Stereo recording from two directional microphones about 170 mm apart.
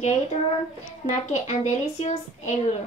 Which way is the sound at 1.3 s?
40° left (ahead or behind).